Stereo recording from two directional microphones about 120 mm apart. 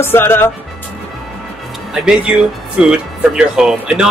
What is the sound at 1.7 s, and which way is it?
Speech, centre (ahead or behind).